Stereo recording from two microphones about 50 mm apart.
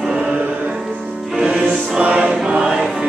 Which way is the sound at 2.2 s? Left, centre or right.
Centre.